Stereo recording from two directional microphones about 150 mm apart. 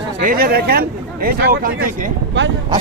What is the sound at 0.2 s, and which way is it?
Speech, 70° right (ahead or behind).